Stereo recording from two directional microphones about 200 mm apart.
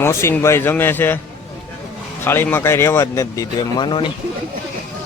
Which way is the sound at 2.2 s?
10° left (ahead or behind).